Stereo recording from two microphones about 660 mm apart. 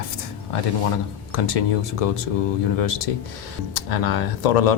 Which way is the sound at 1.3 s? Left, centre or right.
Left.